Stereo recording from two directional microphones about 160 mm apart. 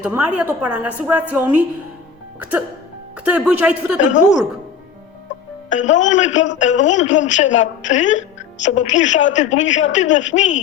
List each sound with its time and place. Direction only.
0.0 s a woman's voice: 5° right (ahead or behind)
4.0 s speech: 50° left (ahead or behind)
5.6 s speech: 50° left (ahead or behind)